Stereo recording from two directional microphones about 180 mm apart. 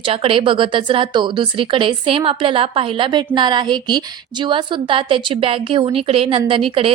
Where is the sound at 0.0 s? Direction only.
30° right (ahead or behind).